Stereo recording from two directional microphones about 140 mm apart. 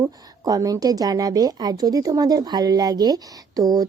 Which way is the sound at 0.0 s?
25° right (ahead or behind).